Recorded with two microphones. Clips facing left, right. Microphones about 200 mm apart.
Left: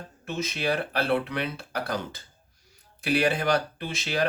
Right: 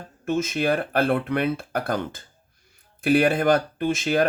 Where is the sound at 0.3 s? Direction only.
50° right (ahead or behind).